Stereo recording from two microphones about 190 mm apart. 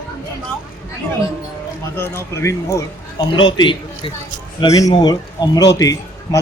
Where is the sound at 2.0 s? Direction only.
10° left (ahead or behind).